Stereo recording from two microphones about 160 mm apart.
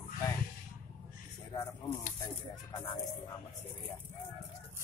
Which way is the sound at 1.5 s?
20° left (ahead or behind).